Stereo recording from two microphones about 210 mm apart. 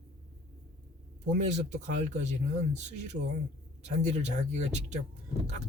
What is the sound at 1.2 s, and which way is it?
A woman's voice, 35° right (ahead or behind).